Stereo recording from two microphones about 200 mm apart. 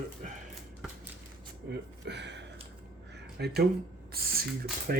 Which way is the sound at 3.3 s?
55° right (ahead or behind).